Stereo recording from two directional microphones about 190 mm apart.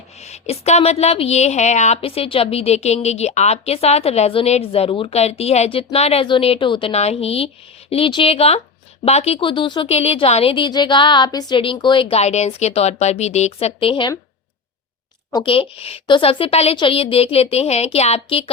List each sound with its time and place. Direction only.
0.2 s a woman's voice: 35° left (ahead or behind)
15.3 s a woman's voice: 25° left (ahead or behind)